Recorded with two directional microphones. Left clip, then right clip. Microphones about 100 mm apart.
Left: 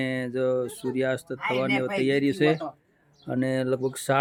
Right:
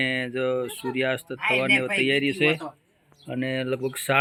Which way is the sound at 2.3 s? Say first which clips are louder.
Even; 55° left (ahead or behind).